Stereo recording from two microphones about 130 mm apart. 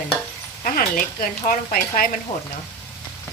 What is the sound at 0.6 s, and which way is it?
Speech, 90° left.